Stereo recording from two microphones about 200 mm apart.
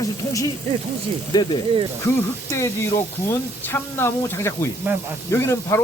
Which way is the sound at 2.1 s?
15° left (ahead or behind).